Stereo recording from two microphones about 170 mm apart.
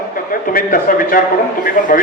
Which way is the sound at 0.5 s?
55° left (ahead or behind).